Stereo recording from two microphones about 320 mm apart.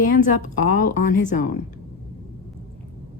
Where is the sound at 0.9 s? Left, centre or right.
Left.